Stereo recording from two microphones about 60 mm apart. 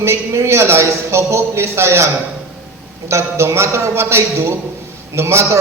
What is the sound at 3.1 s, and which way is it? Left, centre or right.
A man's voice, right.